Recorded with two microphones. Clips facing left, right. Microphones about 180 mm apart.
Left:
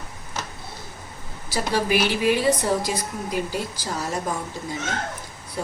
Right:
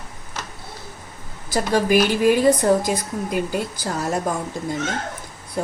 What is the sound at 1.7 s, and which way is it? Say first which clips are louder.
A woman's voice: right 5 dB; 45° right (ahead or behind).